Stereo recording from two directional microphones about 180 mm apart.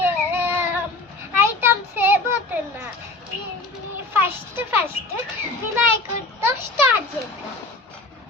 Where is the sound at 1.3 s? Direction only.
10° right (ahead or behind).